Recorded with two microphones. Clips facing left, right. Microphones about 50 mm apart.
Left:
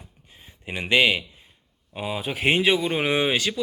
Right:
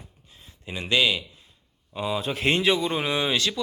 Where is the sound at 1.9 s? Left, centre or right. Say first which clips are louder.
Right 1 dB; centre.